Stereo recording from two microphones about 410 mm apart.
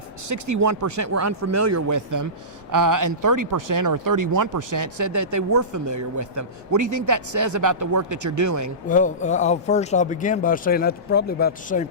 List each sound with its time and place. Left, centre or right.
0.3 s speech: right
8.9 s speech: centre